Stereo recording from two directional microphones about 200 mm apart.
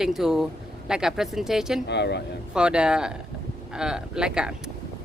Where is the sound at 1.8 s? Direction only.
60° left (ahead or behind).